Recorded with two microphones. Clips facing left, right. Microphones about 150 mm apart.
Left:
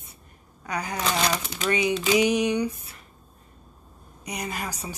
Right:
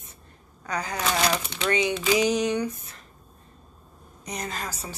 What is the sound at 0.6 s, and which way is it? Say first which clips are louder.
Speech: even; 15° left (ahead or behind).